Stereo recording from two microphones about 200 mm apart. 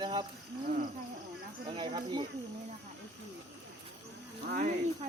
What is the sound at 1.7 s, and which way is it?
Speech, 25° right (ahead or behind).